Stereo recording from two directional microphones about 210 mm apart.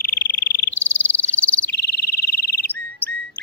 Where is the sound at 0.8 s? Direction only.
5° left (ahead or behind).